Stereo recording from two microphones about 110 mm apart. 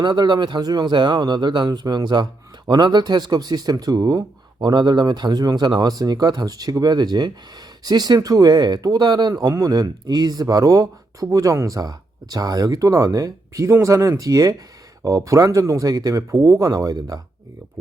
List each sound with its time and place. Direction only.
0.0 s speech: 40° right (ahead or behind)